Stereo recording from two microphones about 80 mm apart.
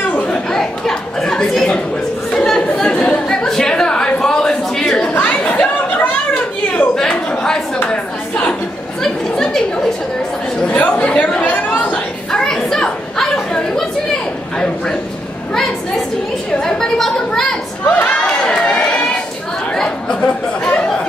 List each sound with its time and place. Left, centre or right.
0.0 s a sound: centre
0.5 s chatter: centre
5.1 s chatter: left
6.8 s a sound: centre
9.0 s chatter: centre
10.6 s chatter: centre
16.5 s a sound: centre
17.8 s crowd: left
18.1 s run: centre
19.7 s chatter: centre